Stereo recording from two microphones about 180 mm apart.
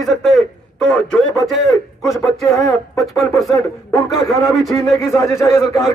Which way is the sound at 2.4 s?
15° left (ahead or behind).